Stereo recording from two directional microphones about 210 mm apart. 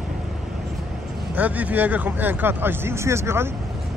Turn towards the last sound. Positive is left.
turn(degrees=-10)  # may be behind; listen again after turning